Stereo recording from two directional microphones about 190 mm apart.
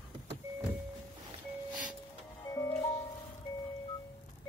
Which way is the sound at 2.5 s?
15° left (ahead or behind).